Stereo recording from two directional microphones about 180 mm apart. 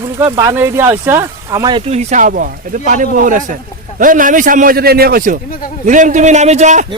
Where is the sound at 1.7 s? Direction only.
35° right (ahead or behind).